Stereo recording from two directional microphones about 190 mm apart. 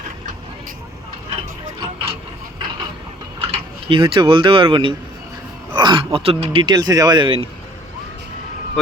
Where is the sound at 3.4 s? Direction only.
30° right (ahead or behind).